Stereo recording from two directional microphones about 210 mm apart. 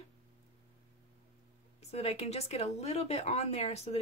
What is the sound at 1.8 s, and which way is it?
Speech, 30° left (ahead or behind).